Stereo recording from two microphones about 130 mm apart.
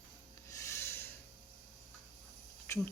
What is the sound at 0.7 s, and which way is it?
Snort, 20° left (ahead or behind).